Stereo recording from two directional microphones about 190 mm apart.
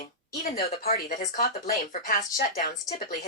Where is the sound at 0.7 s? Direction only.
35° left (ahead or behind).